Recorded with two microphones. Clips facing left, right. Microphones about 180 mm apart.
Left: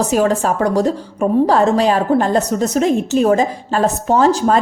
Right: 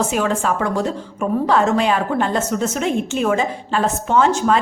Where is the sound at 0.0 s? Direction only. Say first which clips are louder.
Left 4 dB; 40° left (ahead or behind).